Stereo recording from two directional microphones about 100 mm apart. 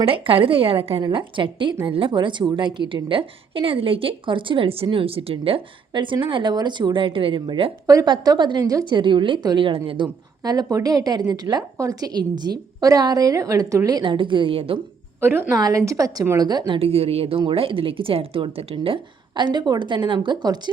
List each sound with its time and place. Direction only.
0.0 s a woman's voice: 70° right (ahead or behind)
1.0 s a woman's voice: 55° right (ahead or behind)
5.9 s a woman's voice: 55° right (ahead or behind)
10.4 s a woman's voice: 40° right (ahead or behind)
14.0 s a woman's voice: 55° right (ahead or behind)
15.2 s a woman's voice: 25° right (ahead or behind)
15.5 s a woman's voice: 35° right (ahead or behind)
16.8 s a woman's voice: 80° right; by 18.9 s 65° right (ahead or behind)
19.4 s a woman's voice: 50° right (ahead or behind)